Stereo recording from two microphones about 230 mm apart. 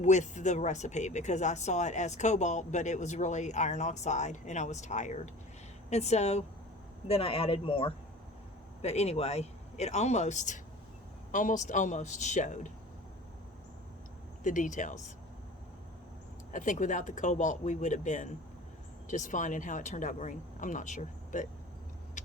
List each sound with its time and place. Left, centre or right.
0.0 s speech: left
14.4 s speech: left
16.5 s speech: left